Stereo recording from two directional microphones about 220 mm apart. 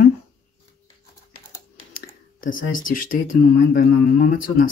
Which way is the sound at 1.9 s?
40° left (ahead or behind).